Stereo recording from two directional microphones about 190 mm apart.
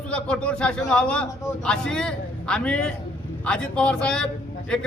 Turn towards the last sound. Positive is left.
turn(degrees=5)  # may be behind; listen again after turning